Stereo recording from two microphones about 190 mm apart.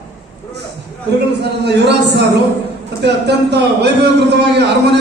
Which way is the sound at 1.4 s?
60° right (ahead or behind).